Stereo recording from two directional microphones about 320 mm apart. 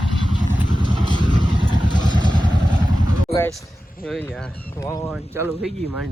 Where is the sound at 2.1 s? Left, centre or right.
Centre.